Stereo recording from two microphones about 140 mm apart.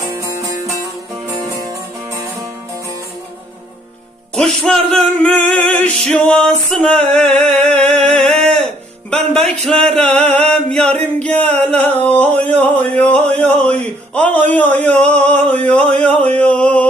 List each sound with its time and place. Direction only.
0.1 s music: 25° right (ahead or behind)
4.4 s music: 5° left (ahead or behind)
9.0 s speech: 5° left (ahead or behind)
10.0 s chant: 5° left (ahead or behind)
11.0 s a sound: 10° left (ahead or behind)